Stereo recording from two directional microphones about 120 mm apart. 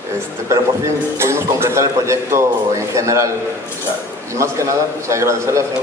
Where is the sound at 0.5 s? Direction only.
25° right (ahead or behind).